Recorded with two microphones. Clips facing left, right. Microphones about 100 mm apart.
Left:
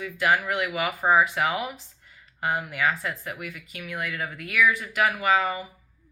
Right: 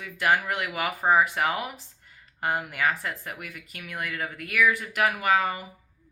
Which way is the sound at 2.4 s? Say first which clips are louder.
Left 1 dB; 45° right (ahead or behind).